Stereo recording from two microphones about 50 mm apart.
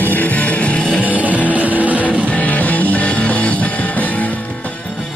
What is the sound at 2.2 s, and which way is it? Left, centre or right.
Music, left.